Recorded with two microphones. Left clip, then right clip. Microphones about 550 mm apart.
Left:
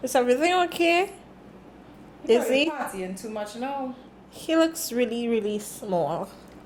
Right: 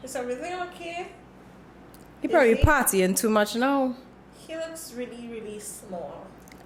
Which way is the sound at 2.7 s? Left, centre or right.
Right.